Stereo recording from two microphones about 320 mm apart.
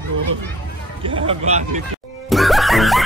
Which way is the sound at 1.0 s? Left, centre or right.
Centre.